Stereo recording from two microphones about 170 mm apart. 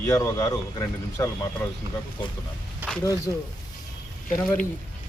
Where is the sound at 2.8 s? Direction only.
10° right (ahead or behind).